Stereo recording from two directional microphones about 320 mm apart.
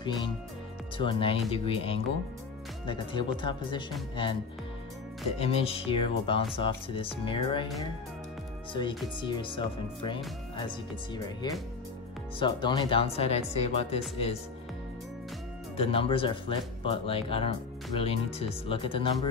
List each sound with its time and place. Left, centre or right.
0.9 s speech: centre
5.4 s speech: centre
8.7 s speech: centre
15.7 s speech: centre